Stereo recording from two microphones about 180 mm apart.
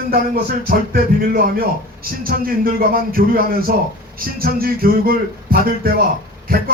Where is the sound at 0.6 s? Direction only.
55° right (ahead or behind).